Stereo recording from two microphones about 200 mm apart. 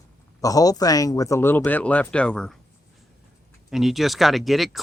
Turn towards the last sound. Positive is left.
turn(degrees=0)  # may be behind; listen again after turning